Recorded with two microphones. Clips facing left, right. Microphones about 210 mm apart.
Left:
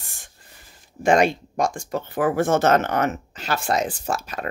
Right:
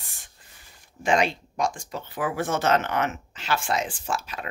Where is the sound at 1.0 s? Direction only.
50° left (ahead or behind).